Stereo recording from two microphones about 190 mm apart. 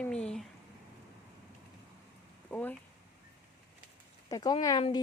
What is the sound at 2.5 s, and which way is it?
Speech, 5° left (ahead or behind).